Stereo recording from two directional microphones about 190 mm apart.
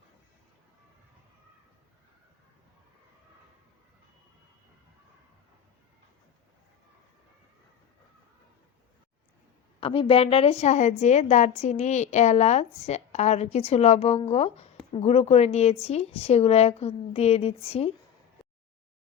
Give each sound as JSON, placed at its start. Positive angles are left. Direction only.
{"t": 9.8, "sound": "a woman's voice", "side_deg": 30}